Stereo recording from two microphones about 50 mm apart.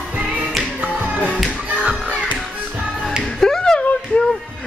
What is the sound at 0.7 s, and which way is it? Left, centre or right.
Music, right.